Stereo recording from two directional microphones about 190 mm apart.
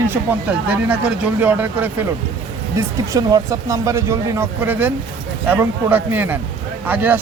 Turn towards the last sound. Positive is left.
turn(degrees=-10)  # may be behind; listen again after turning